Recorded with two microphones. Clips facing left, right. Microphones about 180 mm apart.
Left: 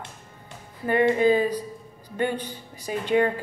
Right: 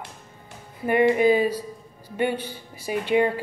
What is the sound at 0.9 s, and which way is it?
A woman's voice, 15° right (ahead or behind).